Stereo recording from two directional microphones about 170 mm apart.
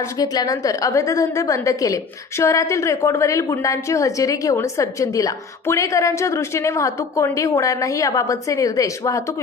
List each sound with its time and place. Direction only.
0.2 s a woman's voice: 20° left (ahead or behind)